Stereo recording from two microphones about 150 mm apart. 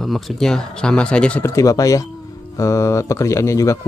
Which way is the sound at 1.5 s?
20° left (ahead or behind).